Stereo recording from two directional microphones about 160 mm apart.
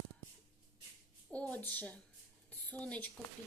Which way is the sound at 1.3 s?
10° left (ahead or behind).